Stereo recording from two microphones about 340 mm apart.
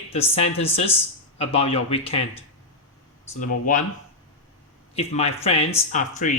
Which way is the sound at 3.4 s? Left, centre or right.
Left.